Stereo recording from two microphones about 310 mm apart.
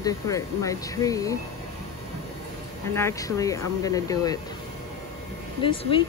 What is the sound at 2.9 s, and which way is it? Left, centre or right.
Speech, centre.